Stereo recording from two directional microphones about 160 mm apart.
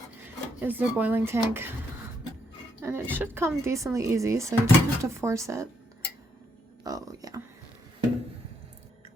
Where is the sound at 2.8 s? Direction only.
15° right (ahead or behind).